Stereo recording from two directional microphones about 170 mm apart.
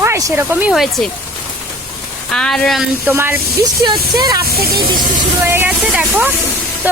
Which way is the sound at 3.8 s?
25° right (ahead or behind).